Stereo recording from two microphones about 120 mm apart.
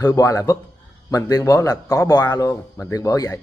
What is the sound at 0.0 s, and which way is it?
A man's voice, 30° left (ahead or behind).